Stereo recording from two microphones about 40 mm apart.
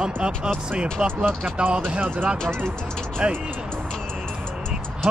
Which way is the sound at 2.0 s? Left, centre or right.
Right.